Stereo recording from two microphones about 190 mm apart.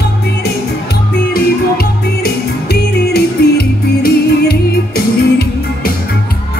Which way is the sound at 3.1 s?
55° left (ahead or behind).